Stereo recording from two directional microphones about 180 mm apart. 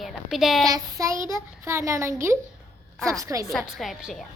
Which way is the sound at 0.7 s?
20° right (ahead or behind).